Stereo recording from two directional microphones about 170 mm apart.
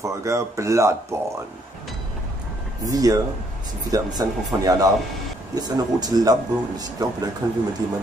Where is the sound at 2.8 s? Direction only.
20° right (ahead or behind).